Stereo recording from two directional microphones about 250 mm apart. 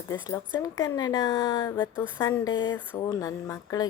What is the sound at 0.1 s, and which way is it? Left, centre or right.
Speech, centre.